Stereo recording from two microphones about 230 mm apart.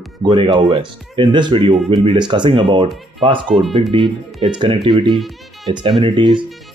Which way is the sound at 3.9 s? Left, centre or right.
Right.